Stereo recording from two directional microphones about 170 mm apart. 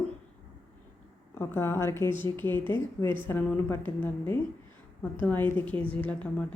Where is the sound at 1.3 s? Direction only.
15° left (ahead or behind).